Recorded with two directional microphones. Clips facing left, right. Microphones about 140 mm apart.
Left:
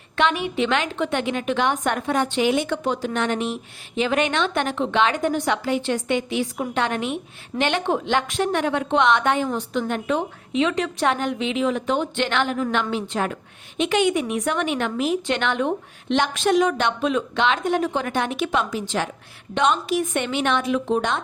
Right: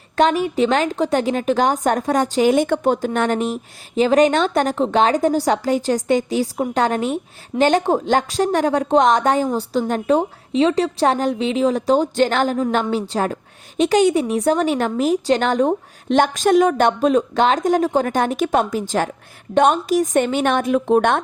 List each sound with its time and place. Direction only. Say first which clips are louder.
0.2 s a woman's voice: right 5 dB; 40° right (ahead or behind); by 21.2 s 55° right (ahead or behind)